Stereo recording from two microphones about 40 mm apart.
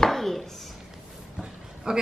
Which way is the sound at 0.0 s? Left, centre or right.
Centre.